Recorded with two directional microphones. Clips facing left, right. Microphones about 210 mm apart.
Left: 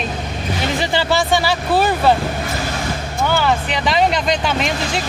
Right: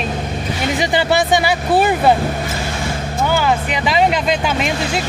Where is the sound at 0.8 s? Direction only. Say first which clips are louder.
Right 3 dB; 15° right (ahead or behind).